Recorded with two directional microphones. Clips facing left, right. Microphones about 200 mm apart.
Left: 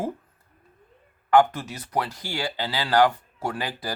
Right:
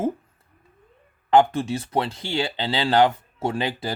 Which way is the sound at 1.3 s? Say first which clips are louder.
Right 2 dB; 25° right (ahead or behind).